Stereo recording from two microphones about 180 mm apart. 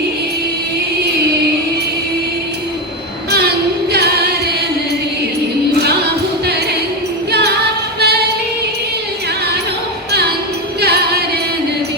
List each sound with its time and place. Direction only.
3.9 s music: 65° right (ahead or behind)
7.3 s a capella: 65° right (ahead or behind)
7.9 s music: 65° right (ahead or behind)
10.8 s music: 65° right (ahead or behind)